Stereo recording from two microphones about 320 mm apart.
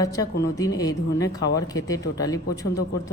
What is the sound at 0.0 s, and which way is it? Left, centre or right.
A man's voice, centre.